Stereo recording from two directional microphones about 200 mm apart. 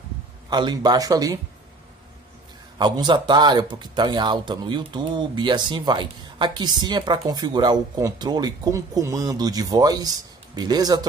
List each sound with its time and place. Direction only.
0.5 s speech: 20° right (ahead or behind)
2.8 s speech: 20° right (ahead or behind)